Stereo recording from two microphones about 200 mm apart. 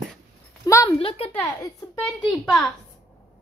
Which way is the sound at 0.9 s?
30° left (ahead or behind).